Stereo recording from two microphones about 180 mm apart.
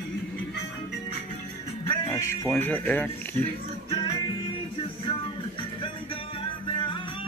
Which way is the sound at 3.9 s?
30° left (ahead or behind).